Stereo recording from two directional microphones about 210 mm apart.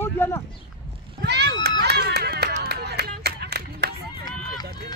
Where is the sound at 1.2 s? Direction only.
55° right (ahead or behind).